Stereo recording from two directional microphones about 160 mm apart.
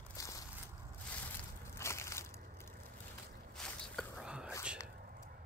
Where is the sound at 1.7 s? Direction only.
15° left (ahead or behind).